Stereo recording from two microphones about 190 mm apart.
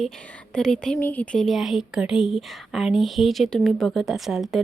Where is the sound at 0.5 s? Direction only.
5° left (ahead or behind).